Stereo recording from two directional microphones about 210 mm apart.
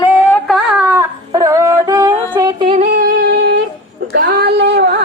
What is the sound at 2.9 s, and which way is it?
Music, 50° right (ahead or behind).